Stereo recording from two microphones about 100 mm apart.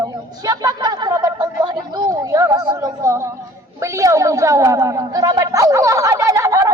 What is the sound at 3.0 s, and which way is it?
Music, 30° right (ahead or behind).